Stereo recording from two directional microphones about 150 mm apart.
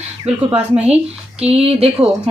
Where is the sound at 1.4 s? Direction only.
40° right (ahead or behind).